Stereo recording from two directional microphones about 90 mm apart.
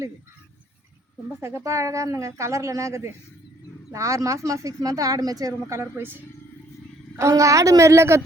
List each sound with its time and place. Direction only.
1.4 s speech: 30° right (ahead or behind)
7.2 s speech: 35° right (ahead or behind)